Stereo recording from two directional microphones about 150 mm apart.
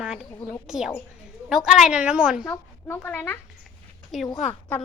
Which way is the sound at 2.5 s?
15° left (ahead or behind).